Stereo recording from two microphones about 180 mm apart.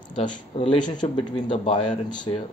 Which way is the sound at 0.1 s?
30° left (ahead or behind).